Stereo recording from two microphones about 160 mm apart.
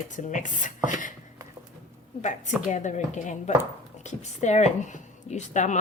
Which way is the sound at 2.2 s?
50° left (ahead or behind).